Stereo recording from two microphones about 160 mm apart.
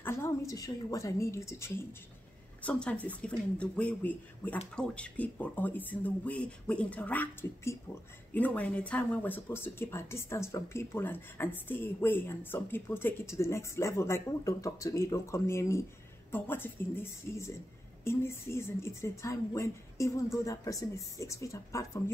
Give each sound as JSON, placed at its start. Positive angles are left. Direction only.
{"t": 0.0, "sound": "speech", "side_deg": 15}